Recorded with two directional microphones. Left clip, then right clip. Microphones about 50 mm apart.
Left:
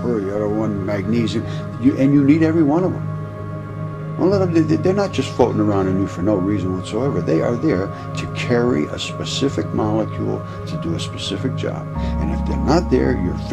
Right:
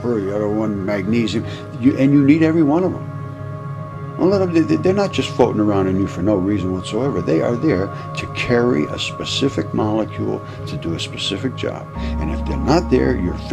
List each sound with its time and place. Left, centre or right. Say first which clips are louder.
0.0 s speech: right 1 dB; right
4.2 s speech: right 1 dB; centre